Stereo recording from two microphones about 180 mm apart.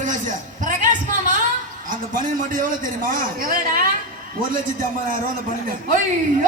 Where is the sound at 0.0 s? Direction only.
45° right (ahead or behind).